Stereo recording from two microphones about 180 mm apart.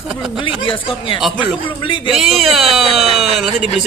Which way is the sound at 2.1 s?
Centre (ahead or behind).